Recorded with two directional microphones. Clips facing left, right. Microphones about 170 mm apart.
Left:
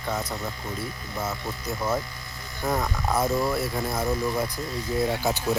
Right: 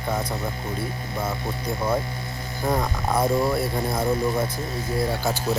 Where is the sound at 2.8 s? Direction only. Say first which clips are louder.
Right 2 dB; 10° right (ahead or behind).